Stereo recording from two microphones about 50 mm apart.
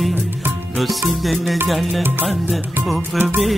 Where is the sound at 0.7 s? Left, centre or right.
Centre.